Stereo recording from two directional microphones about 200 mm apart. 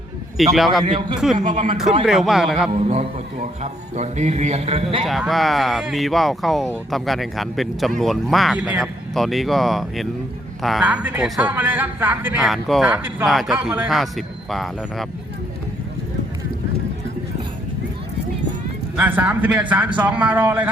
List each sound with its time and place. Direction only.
0.5 s a man's voice: centre (ahead or behind)
0.9 s a man's voice: 25° right (ahead or behind)
2.0 s a man's voice: centre (ahead or behind)
2.7 s speech: 35° right (ahead or behind)
5.0 s a man's voice: centre (ahead or behind)
18.9 s a man's voice: 10° right (ahead or behind)